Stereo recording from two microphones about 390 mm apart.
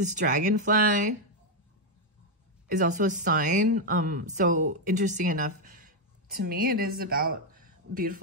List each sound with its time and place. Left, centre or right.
0.1 s speech: centre
2.8 s speech: centre